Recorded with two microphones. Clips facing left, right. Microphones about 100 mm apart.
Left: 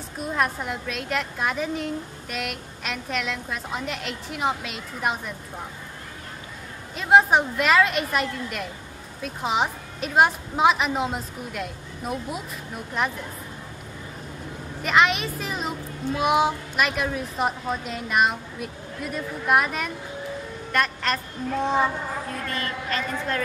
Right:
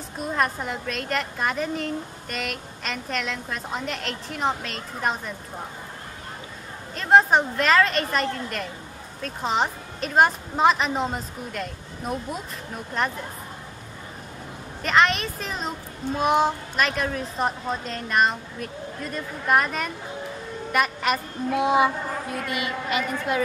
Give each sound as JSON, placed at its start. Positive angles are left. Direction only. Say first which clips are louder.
{"t": 0.2, "sound": "a woman's voice", "louder": "even", "side_deg": 0}
{"t": 7.0, "sound": "a woman's voice", "louder": "even", "side_deg": 5}
{"t": 14.8, "sound": "a woman's voice", "louder": "even", "side_deg": 5}